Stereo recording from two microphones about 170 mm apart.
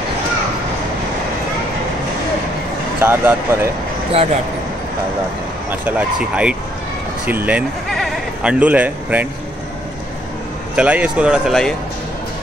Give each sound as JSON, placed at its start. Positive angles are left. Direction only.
{"t": 3.0, "sound": "speech", "side_deg": -15}
{"t": 4.1, "sound": "speech", "side_deg": -35}
{"t": 5.7, "sound": "speech", "side_deg": -10}
{"t": 10.8, "sound": "speech", "side_deg": -5}